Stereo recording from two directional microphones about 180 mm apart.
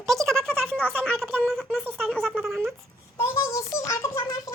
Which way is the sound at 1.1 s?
Centre (ahead or behind).